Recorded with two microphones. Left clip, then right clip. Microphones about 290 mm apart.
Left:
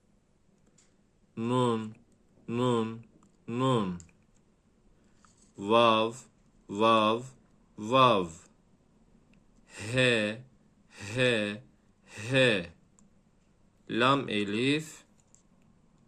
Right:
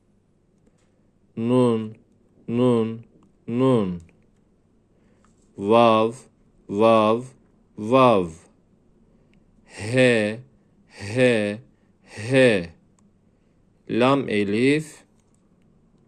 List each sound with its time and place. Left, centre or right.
1.4 s speech: centre
5.5 s a man's voice: centre
9.3 s gasp: right
10.8 s a man's voice: centre
13.8 s a man's voice: centre